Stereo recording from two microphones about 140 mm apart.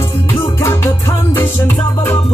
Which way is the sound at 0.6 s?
15° left (ahead or behind).